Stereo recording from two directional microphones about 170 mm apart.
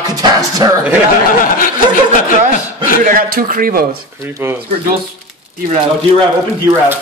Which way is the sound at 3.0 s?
55° right (ahead or behind).